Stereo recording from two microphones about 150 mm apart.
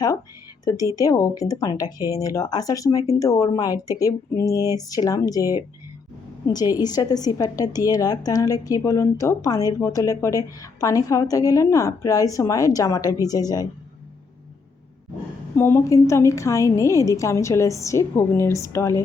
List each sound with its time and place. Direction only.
0.6 s a woman's voice: 20° left (ahead or behind)
6.6 s a woman's voice: 25° left (ahead or behind)
15.5 s a woman's voice: 15° left (ahead or behind)